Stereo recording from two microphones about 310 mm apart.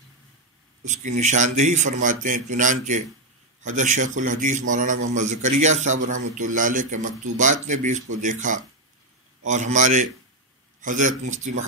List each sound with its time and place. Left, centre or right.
0.8 s speech: right